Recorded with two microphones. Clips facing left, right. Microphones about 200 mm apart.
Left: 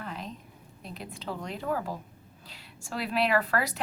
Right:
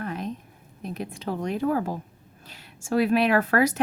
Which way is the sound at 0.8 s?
50° right (ahead or behind).